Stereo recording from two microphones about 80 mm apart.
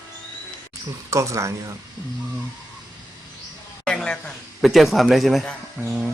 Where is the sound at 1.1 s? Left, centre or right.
Right.